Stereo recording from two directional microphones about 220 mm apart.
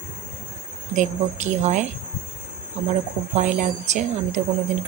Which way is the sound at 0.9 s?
35° right (ahead or behind).